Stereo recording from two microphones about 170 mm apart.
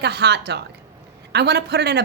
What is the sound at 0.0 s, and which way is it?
A woman's voice, 80° right.